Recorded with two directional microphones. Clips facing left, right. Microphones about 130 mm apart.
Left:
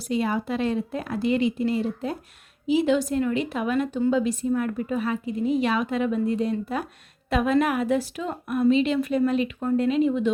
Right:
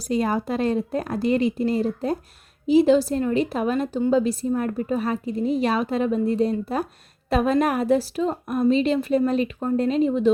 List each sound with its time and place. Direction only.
0.1 s a woman's voice: 40° right (ahead or behind)